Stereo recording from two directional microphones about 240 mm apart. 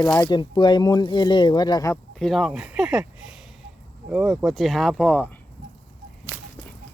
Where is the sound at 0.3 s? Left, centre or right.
Centre.